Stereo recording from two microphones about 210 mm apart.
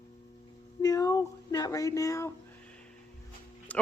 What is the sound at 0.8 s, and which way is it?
A woman's voice, 15° left (ahead or behind).